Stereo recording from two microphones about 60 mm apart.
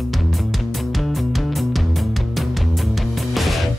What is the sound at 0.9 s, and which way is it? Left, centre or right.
Music, centre.